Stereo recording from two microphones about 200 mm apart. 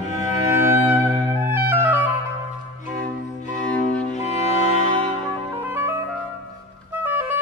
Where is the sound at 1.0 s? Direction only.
5° left (ahead or behind).